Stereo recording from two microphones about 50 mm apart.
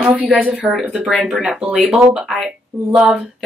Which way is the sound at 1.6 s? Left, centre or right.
Right.